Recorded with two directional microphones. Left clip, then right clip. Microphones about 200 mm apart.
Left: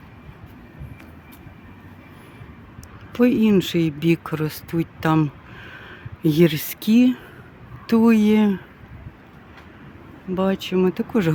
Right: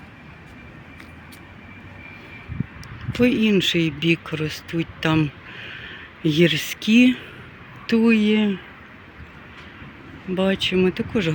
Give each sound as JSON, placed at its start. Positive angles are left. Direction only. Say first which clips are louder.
{"t": 3.2, "sound": "speech", "louder": "left 1 dB", "side_deg": 20}
{"t": 7.0, "sound": "speech", "louder": "right 2 dB", "side_deg": 5}
{"t": 7.9, "sound": "speech", "louder": "left 1 dB", "side_deg": 20}
{"t": 10.3, "sound": "speech", "louder": "right 1 dB", "side_deg": 10}